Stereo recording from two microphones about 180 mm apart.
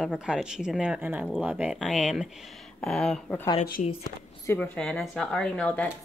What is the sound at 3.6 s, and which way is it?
Speech, 60° left (ahead or behind).